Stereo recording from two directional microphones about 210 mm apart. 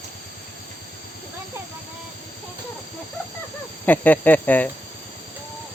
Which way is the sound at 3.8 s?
10° left (ahead or behind).